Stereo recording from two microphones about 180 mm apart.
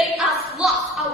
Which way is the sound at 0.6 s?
Centre (ahead or behind).